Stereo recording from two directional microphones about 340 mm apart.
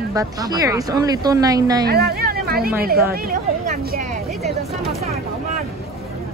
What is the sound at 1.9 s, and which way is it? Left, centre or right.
Speech, right.